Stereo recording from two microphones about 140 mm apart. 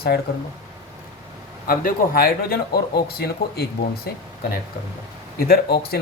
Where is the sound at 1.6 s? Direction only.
85° left.